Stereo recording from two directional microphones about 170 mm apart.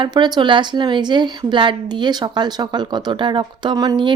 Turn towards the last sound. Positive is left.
turn(degrees=-30)  # may be behind; listen again after turning